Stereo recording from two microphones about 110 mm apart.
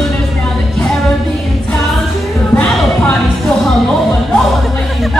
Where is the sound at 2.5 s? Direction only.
10° left (ahead or behind).